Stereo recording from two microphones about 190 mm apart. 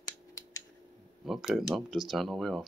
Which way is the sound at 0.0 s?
20° left (ahead or behind).